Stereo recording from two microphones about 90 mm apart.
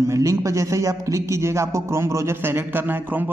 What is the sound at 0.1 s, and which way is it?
A man's voice, 35° right (ahead or behind).